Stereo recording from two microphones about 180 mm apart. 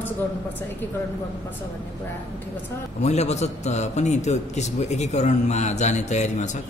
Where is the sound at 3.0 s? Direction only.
40° left (ahead or behind).